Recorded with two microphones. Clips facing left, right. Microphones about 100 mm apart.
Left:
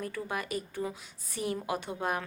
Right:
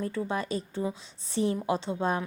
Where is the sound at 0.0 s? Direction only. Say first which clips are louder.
Right 5 dB; 25° right (ahead or behind).